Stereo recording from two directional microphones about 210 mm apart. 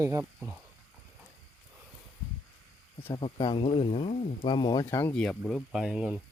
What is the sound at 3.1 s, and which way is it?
Speech, 20° left (ahead or behind).